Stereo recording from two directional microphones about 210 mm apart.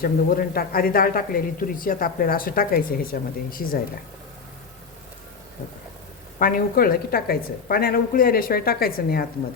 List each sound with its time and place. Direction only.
0.0 s speech: 45° left (ahead or behind)
6.4 s speech: 45° left (ahead or behind)